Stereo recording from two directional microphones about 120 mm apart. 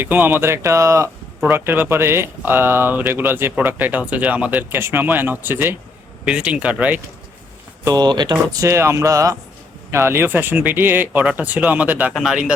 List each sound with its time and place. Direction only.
0.0 s speech: 15° right (ahead or behind)
7.9 s speech: 35° right (ahead or behind); by 12.5 s 5° right (ahead or behind)